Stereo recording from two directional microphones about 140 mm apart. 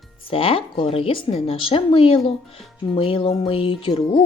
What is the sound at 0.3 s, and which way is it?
A woman's voice, 40° left (ahead or behind).